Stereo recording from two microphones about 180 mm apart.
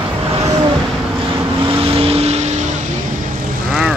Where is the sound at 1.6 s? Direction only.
30° right (ahead or behind).